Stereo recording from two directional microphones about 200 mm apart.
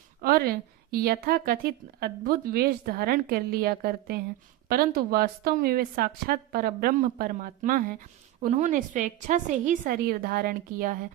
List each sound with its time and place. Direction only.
0.2 s a woman's voice: 50° right (ahead or behind)